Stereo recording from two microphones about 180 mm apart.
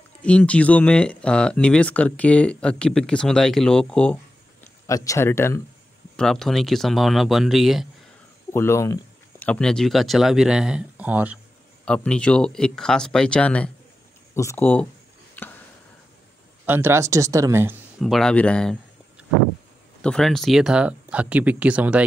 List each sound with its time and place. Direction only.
0.2 s speech: 5° left (ahead or behind)
4.8 s speech: 15° left (ahead or behind)
6.1 s speech: 5° left (ahead or behind)
8.5 s speech: 15° left (ahead or behind); by 11.3 s 10° right (ahead or behind)
11.8 s speech: 5° left (ahead or behind)
16.6 s speech: 10° right (ahead or behind)
18.0 s speech: centre (ahead or behind)
20.0 s speech: 5° left (ahead or behind)